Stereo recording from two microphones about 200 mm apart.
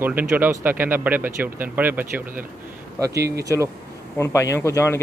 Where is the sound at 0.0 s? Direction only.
10° right (ahead or behind).